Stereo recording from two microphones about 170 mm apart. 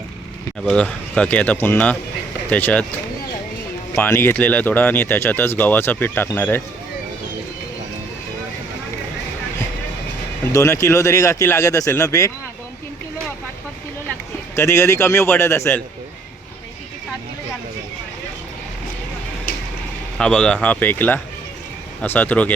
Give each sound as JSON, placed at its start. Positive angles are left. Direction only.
{"t": 0.6, "sound": "speech", "side_deg": 5}
{"t": 3.9, "sound": "speech", "side_deg": 15}
{"t": 10.4, "sound": "speech", "side_deg": 20}
{"t": 14.5, "sound": "speech", "side_deg": 15}
{"t": 20.1, "sound": "speech", "side_deg": 5}